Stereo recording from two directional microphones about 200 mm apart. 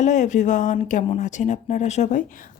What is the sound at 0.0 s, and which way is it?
Speech, 35° left (ahead or behind).